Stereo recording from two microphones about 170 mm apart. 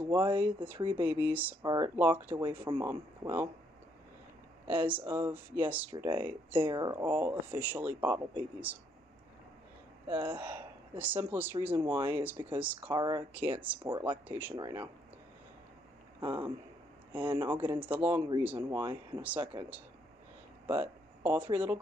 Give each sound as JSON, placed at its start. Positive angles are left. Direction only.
{"t": 0.0, "sound": "speech", "side_deg": -10}
{"t": 1.6, "sound": "speech", "side_deg": -20}
{"t": 2.0, "sound": "speech", "side_deg": -10}
{"t": 4.6, "sound": "speech", "side_deg": -10}
{"t": 5.9, "sound": "speech", "side_deg": -25}
{"t": 6.9, "sound": "speech", "side_deg": -10}
{"t": 10.0, "sound": "speech", "side_deg": -10}
{"t": 12.9, "sound": "speech", "side_deg": -25}
{"t": 13.3, "sound": "speech", "side_deg": -10}
{"t": 16.3, "sound": "speech", "side_deg": -10}
{"t": 20.6, "sound": "speech", "side_deg": -10}